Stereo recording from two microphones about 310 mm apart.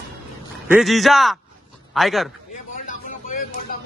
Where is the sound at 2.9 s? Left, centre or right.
Left.